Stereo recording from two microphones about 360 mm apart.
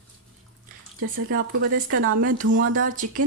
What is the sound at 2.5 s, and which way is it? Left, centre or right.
Speech, right.